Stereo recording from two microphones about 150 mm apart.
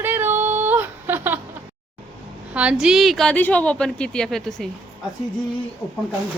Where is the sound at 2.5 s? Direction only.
10° right (ahead or behind).